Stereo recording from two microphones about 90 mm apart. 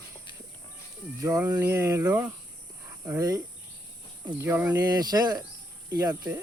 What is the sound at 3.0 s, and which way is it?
Speech, 35° right (ahead or behind).